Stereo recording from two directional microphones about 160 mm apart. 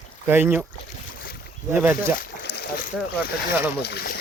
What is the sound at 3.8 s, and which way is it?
Speech, 90° left.